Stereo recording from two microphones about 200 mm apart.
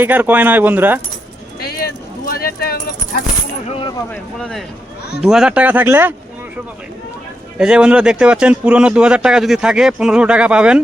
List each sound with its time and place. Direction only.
0.0 s speech: 10° right (ahead or behind)
1.6 s clip-clop: 50° left (ahead or behind)
3.7 s speech: 25° left (ahead or behind)
4.1 s speech: 5° left (ahead or behind)
7.6 s speech: 5° right (ahead or behind)